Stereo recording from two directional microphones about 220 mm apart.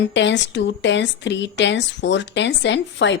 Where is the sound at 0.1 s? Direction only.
55° left (ahead or behind).